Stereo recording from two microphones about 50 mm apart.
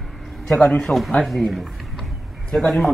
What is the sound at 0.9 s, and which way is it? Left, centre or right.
Speech, left.